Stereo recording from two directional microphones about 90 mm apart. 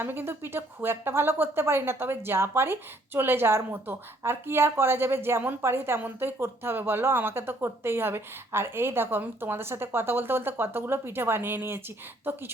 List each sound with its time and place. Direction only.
0.0 s a woman's voice: 25° right (ahead or behind)